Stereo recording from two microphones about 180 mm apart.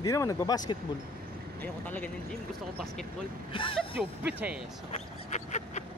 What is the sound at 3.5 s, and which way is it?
Speech, 30° left (ahead or behind).